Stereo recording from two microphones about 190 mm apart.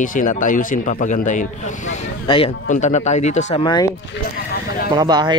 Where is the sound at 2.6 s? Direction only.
40° left (ahead or behind).